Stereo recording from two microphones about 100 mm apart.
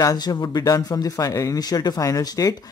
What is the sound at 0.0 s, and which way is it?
Speech, 40° left (ahead or behind).